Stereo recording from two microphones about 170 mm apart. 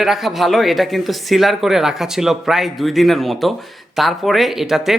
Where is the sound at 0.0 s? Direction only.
Centre (ahead or behind).